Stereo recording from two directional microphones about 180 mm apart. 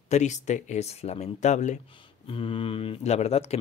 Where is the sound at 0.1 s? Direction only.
40° left (ahead or behind).